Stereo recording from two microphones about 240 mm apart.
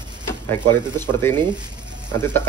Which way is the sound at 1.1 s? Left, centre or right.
Centre.